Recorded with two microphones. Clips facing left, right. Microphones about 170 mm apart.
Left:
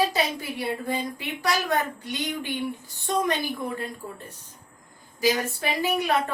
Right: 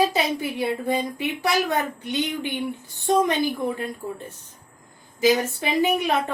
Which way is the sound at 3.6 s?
20° right (ahead or behind).